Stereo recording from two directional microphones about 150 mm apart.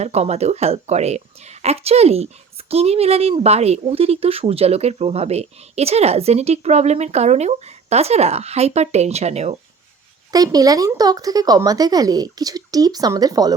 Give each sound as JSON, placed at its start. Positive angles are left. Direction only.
{"t": 0.0, "sound": "speech", "side_deg": -45}
{"t": 10.3, "sound": "speech", "side_deg": -25}